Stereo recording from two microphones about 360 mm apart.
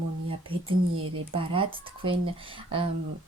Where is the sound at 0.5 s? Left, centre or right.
Right.